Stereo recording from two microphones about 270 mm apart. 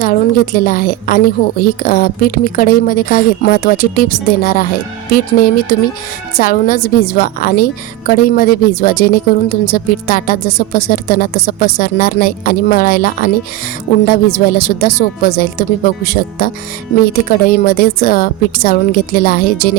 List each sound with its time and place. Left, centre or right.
0.0 s a woman's voice: left